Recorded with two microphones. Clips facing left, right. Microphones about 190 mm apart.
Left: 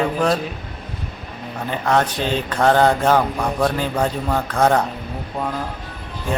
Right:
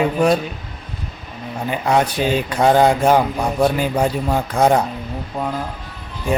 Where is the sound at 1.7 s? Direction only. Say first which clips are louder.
Right 1 dB; 10° right (ahead or behind).